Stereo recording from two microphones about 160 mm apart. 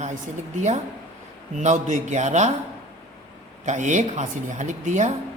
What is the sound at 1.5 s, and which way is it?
Speech, 50° right (ahead or behind).